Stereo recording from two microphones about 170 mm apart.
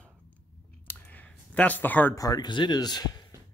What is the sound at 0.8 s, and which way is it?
Clicking, 10° left (ahead or behind).